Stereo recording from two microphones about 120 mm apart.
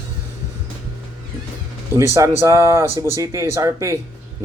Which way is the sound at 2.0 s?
25° right (ahead or behind).